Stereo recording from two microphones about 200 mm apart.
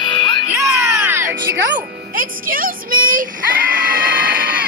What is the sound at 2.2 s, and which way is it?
Music, 45° right (ahead or behind).